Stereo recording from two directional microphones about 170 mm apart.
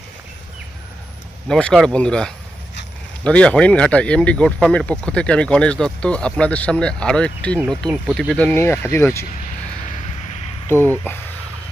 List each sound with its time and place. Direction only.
1.5 s speech: 5° left (ahead or behind)
10.7 s speech: 10° left (ahead or behind)